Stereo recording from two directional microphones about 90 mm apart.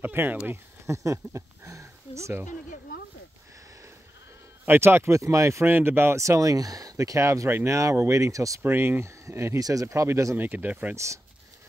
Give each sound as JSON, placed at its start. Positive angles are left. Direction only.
{"t": 0.0, "sound": "speech", "side_deg": -20}
{"t": 0.5, "sound": "speech", "side_deg": -35}
{"t": 4.6, "sound": "speech", "side_deg": -25}
{"t": 8.6, "sound": "speech", "side_deg": -25}
{"t": 9.6, "sound": "speech", "side_deg": -40}
{"t": 10.3, "sound": "speech", "side_deg": -20}